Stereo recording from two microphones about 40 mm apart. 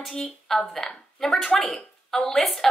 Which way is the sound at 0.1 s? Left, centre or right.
Centre.